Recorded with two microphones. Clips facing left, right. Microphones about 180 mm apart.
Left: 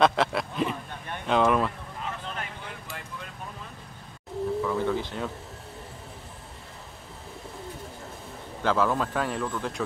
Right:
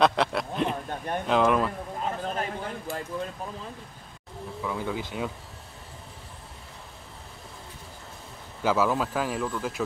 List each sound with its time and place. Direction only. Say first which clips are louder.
0.0 s speech: even; centre (ahead or behind)
0.8 s a sound: right 7 dB; 40° right (ahead or behind)
1.2 s speech: even; centre (ahead or behind)
2.0 s a sound: right 9 dB; 40° right (ahead or behind)
4.6 s speech: left 4 dB; 10° right (ahead or behind)
8.6 s speech: even; 5° right (ahead or behind)